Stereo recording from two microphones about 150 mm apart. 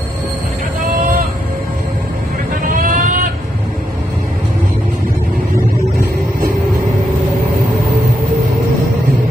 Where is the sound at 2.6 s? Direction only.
65° right (ahead or behind).